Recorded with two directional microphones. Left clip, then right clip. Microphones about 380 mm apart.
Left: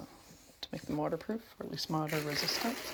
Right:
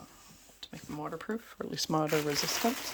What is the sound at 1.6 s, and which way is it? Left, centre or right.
Speech, centre.